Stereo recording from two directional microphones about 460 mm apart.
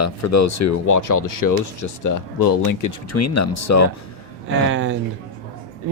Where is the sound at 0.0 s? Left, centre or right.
Left.